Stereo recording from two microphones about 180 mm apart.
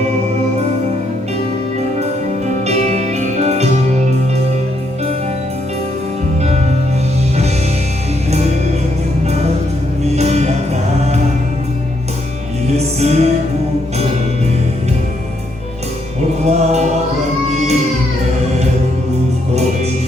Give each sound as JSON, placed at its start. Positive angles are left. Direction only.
{"t": 2.6, "sound": "music", "side_deg": -40}
{"t": 10.2, "sound": "music", "side_deg": -35}
{"t": 12.7, "sound": "music", "side_deg": -35}
{"t": 16.5, "sound": "music", "side_deg": -35}